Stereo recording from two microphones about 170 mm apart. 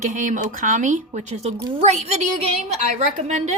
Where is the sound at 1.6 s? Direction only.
30° right (ahead or behind).